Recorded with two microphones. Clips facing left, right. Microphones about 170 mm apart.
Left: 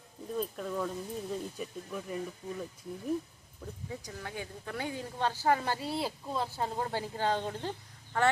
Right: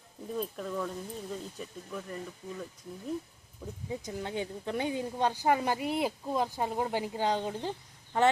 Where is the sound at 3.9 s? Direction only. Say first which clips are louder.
Right 7 dB; 20° right (ahead or behind).